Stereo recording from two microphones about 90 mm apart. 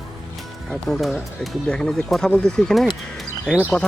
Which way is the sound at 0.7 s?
Centre (ahead or behind).